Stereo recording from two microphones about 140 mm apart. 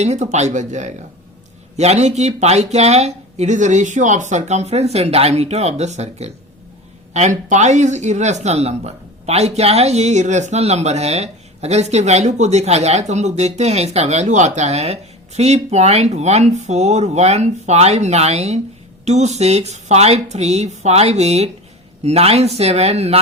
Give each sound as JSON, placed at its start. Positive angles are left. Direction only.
{"t": 0.0, "sound": "speech", "side_deg": -55}